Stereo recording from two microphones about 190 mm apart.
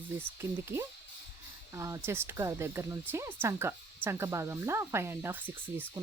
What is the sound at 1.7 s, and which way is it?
Speech, 15° right (ahead or behind).